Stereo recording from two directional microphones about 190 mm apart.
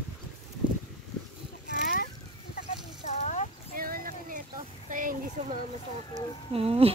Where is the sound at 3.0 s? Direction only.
40° left (ahead or behind).